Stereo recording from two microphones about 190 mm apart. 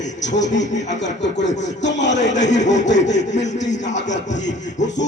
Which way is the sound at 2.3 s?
40° left (ahead or behind).